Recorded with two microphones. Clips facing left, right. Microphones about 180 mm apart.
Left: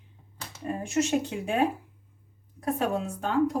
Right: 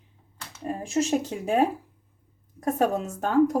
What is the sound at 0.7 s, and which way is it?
A woman's voice, 35° right (ahead or behind).